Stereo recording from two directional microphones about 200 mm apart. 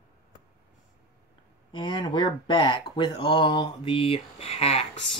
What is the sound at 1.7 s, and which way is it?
Speech, 20° left (ahead or behind).